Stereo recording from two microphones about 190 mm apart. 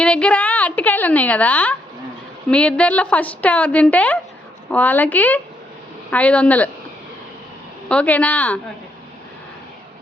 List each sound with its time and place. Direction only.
0.0 s a sound: 5° left (ahead or behind)
2.5 s a woman's voice: 5° left (ahead or behind)
7.9 s a woman's voice: 5° left (ahead or behind)